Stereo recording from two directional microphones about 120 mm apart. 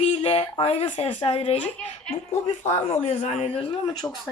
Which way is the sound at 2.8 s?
65° left (ahead or behind).